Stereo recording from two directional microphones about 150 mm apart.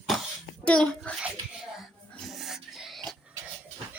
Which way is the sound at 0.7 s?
5° left (ahead or behind).